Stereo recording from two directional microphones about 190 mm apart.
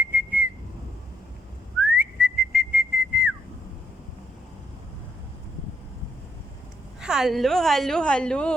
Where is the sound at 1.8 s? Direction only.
5° right (ahead or behind).